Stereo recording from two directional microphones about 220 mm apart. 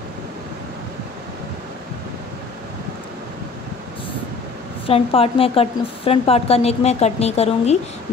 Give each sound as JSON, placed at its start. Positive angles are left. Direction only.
{"t": 4.8, "sound": "speech", "side_deg": 25}